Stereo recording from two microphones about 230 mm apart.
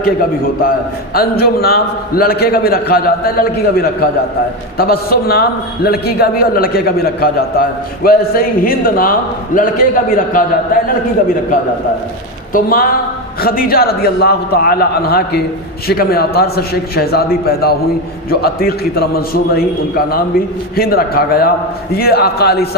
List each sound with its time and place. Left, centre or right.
0.0 s a man's voice: left
12.5 s a man's voice: left